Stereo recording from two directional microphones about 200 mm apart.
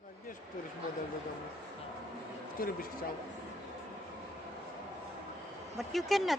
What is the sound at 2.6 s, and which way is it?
Speech, 50° left (ahead or behind).